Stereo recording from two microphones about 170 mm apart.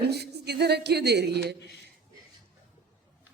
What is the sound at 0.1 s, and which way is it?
A woman's voice, 75° right (ahead or behind).